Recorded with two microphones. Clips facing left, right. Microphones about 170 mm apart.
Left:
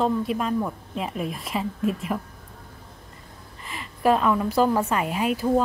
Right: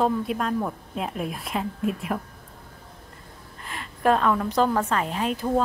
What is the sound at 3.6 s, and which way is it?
A woman's voice, centre (ahead or behind).